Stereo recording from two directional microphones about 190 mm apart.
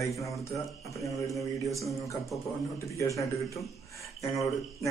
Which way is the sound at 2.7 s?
15° left (ahead or behind).